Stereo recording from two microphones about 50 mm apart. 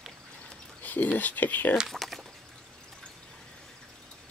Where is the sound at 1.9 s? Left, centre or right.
Centre.